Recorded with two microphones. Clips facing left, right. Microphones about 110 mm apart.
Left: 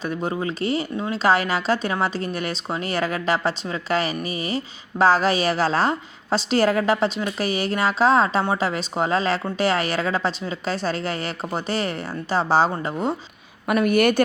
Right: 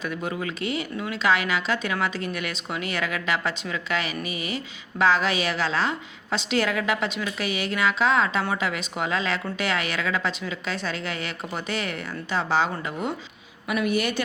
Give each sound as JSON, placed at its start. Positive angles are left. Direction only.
{"t": 0.0, "sound": "speech", "side_deg": 30}
{"t": 13.7, "sound": "a woman's voice", "side_deg": 50}